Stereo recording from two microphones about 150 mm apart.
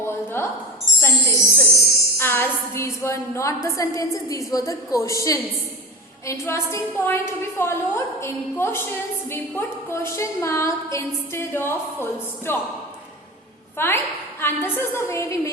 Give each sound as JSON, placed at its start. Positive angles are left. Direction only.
{"t": 0.0, "sound": "a sound", "side_deg": 15}
{"t": 0.9, "sound": "music", "side_deg": 15}
{"t": 2.1, "sound": "a woman's voice", "side_deg": 15}
{"t": 13.7, "sound": "a woman's voice", "side_deg": 15}